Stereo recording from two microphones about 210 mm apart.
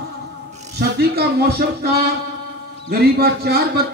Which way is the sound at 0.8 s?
50° right (ahead or behind).